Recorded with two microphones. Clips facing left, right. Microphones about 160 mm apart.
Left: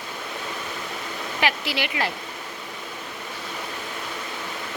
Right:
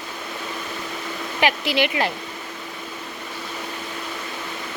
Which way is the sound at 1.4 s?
20° right (ahead or behind).